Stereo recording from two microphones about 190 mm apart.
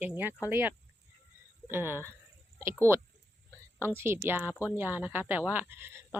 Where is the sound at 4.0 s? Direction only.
10° right (ahead or behind).